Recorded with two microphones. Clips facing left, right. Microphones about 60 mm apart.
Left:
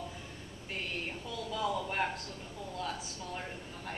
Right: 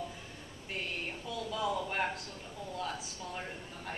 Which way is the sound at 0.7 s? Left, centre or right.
Centre.